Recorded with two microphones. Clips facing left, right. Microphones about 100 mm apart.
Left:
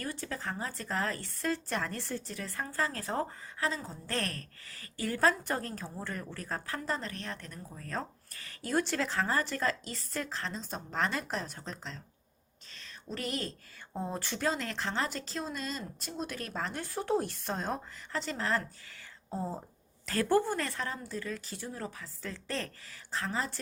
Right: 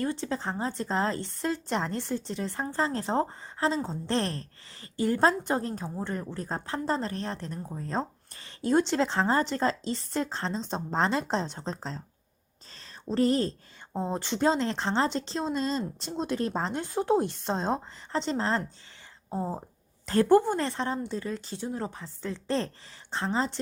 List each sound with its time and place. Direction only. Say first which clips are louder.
0.0 s speech: right 7 dB; 25° right (ahead or behind)
12.7 s a sound: right 12 dB; 35° right (ahead or behind)
13.9 s speech: right 6 dB; 20° right (ahead or behind)